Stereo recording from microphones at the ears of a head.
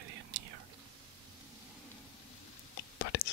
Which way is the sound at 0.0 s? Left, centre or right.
Right.